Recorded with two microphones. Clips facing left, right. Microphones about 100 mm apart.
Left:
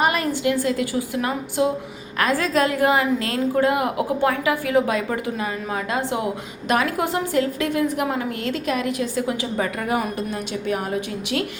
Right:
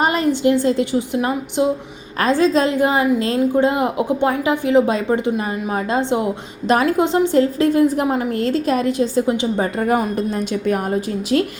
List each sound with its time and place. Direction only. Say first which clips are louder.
0.0 s a woman's voice: right 4 dB; 25° right (ahead or behind)
10.2 s speech: right 6 dB; 45° right (ahead or behind)